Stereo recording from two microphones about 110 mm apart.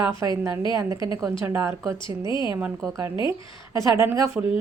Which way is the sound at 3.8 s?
25° right (ahead or behind).